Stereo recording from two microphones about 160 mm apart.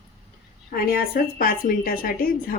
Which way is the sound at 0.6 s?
65° left (ahead or behind).